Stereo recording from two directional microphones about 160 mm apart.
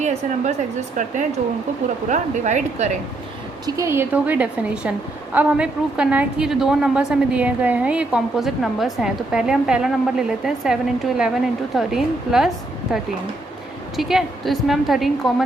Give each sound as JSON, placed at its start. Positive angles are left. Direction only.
{"t": 0.0, "sound": "a woman's voice", "side_deg": -45}
{"t": 3.7, "sound": "a woman's voice", "side_deg": -20}
{"t": 13.9, "sound": "a woman's voice", "side_deg": 0}